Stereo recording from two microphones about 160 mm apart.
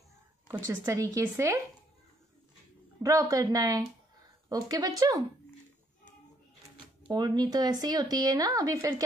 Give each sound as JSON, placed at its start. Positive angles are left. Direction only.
{"t": 0.5, "sound": "speech", "side_deg": -20}
{"t": 3.0, "sound": "speech", "side_deg": -20}
{"t": 7.1, "sound": "speech", "side_deg": -25}